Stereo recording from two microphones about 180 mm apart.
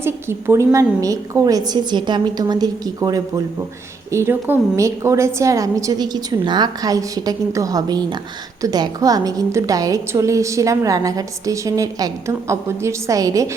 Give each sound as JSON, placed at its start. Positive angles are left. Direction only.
{"t": 0.0, "sound": "a woman's voice", "side_deg": -15}